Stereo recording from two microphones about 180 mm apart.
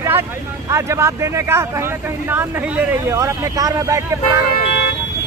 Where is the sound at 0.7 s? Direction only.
15° right (ahead or behind).